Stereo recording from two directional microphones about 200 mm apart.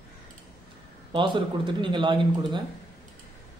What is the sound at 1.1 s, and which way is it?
A man's voice, 25° right (ahead or behind).